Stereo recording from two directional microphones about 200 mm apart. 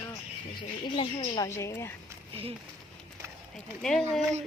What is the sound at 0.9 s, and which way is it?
Speech, 20° left (ahead or behind).